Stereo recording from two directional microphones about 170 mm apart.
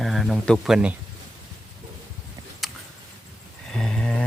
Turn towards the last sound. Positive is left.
turn(degrees=5)  # may be behind; listen again after turning